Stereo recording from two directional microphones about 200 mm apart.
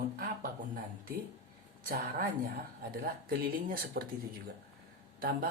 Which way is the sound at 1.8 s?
50° right (ahead or behind).